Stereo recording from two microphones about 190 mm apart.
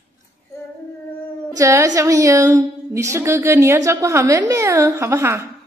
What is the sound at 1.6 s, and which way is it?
A woman's voice, 15° right (ahead or behind).